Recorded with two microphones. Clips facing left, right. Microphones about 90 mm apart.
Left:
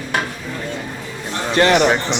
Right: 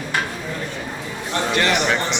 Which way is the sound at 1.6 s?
40° left (ahead or behind).